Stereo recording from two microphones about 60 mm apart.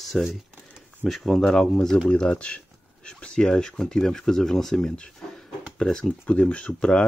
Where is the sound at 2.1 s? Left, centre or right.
Centre.